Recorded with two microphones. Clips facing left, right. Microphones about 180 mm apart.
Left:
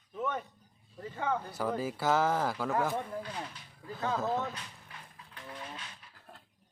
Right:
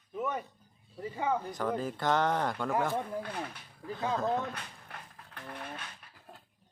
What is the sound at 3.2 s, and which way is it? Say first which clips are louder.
Speech: right 2 dB; 60° right (ahead or behind).